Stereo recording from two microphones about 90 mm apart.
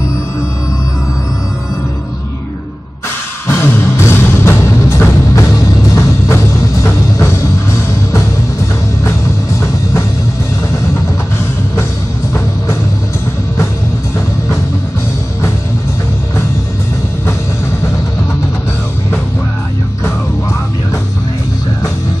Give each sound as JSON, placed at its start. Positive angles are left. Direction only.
{"t": 3.4, "sound": "music", "side_deg": 25}